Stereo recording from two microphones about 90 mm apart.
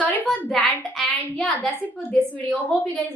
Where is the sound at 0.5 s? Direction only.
Centre (ahead or behind).